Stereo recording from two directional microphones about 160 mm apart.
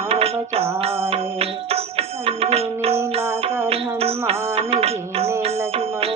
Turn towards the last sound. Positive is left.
turn(degrees=-40)  # may be behind; listen again after turning